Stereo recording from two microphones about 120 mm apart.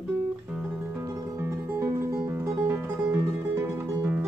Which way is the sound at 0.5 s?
15° right (ahead or behind).